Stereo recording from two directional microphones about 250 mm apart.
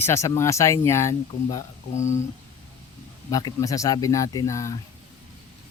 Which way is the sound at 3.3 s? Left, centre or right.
Centre.